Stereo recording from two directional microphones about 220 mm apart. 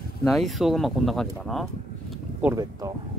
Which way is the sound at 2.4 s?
15° right (ahead or behind).